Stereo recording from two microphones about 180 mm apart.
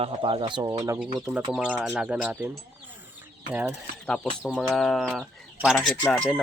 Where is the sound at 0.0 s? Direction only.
30° right (ahead or behind).